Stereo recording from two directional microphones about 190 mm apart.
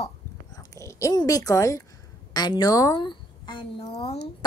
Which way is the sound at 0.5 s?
15° left (ahead or behind).